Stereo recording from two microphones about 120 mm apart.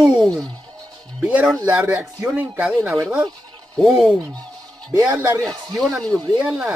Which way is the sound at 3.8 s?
Centre (ahead or behind).